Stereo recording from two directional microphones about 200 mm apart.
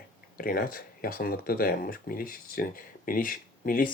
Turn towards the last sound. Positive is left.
turn(degrees=45)  # may be behind; listen again after turning